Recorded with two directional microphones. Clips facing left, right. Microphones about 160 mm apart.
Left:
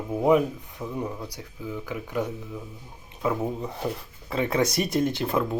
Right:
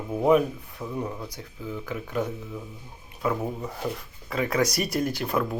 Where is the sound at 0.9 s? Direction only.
5° left (ahead or behind).